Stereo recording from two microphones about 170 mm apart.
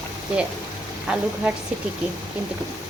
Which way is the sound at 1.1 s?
5° right (ahead or behind).